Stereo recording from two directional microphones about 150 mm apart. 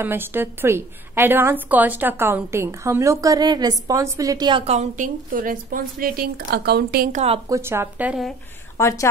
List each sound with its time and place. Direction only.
0.0 s a woman's voice: 15° right (ahead or behind)
4.6 s speech: 50° right (ahead or behind); by 7.1 s 90° right
7.1 s a woman's voice: 50° right (ahead or behind)
7.4 s a woman's voice: 20° right (ahead or behind)
8.7 s a woman's voice: 20° left (ahead or behind)